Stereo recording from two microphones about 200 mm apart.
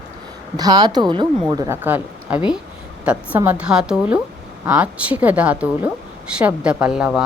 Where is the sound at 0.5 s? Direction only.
20° right (ahead or behind).